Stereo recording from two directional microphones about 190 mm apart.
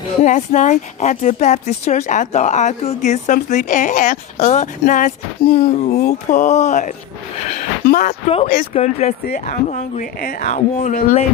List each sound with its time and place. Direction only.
0.2 s speech: 40° left (ahead or behind)